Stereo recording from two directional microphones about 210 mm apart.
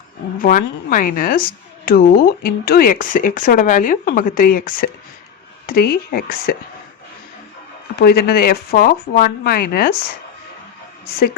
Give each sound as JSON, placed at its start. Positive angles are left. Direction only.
{"t": 0.3, "sound": "a woman's voice", "side_deg": 40}
{"t": 7.9, "sound": "speech", "side_deg": 45}